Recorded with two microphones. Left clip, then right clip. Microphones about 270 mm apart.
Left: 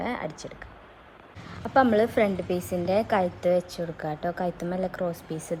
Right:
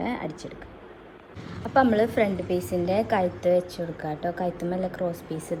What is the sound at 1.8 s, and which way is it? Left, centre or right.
A man's voice, centre.